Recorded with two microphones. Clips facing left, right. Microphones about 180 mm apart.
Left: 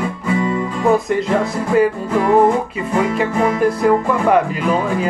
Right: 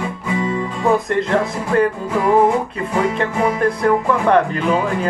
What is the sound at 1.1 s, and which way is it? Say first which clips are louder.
Music: left 1 dB; 5° left (ahead or behind).